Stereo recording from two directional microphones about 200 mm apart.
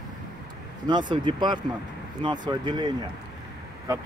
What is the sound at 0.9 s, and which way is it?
Speech, 25° right (ahead or behind).